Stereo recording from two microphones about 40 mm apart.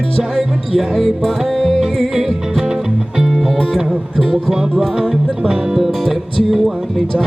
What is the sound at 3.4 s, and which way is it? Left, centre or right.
Music, centre.